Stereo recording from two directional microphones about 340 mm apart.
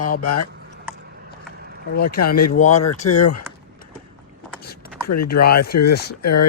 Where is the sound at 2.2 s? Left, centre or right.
Left.